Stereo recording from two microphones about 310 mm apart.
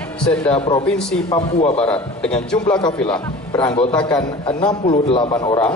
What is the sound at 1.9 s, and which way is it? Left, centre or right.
A man's voice, centre.